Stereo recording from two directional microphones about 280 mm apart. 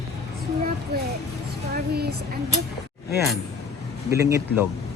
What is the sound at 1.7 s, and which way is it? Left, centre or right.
Speech, right.